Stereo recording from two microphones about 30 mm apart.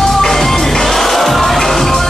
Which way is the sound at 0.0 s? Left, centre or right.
Centre.